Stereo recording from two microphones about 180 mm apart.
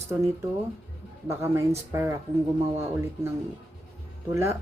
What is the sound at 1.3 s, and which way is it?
Speech, 15° right (ahead or behind).